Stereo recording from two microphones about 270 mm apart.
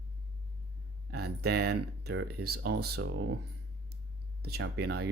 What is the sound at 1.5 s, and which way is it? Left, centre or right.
Speech, right.